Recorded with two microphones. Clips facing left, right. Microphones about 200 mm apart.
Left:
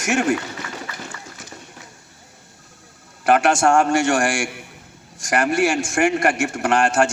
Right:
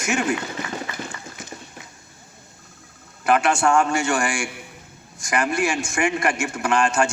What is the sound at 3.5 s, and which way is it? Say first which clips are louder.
Speech: left 3 dB; 45° left (ahead or behind).